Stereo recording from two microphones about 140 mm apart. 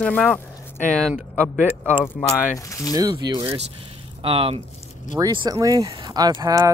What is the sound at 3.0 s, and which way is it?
Speech, 30° right (ahead or behind).